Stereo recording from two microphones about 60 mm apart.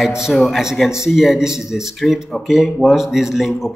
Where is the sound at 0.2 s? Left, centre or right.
Centre.